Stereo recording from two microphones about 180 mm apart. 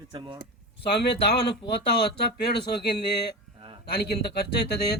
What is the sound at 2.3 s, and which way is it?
Speech, 65° left (ahead or behind).